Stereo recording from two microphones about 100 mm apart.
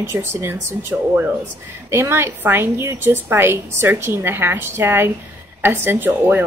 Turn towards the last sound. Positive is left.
turn(degrees=-20)  # may be behind; listen again after turning